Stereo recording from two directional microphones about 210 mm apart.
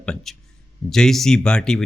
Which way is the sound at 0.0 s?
Centre (ahead or behind).